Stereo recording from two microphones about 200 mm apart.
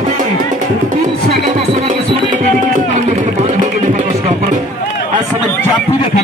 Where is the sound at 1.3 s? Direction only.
35° right (ahead or behind).